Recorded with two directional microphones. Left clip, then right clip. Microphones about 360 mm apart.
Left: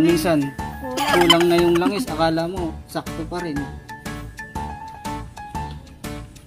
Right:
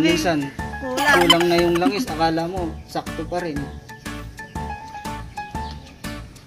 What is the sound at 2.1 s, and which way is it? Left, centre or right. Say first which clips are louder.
Speech: even; left.